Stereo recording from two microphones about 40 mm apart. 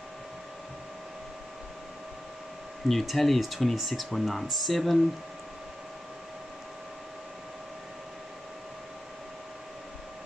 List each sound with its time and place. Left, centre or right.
2.9 s speech: centre